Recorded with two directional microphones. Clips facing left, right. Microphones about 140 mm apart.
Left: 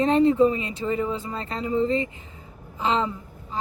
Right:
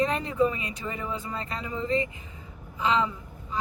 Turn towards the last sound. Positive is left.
turn(degrees=30)  # may be behind; listen again after turning